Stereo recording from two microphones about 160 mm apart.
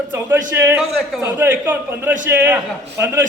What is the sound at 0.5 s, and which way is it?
Speech, 15° right (ahead or behind).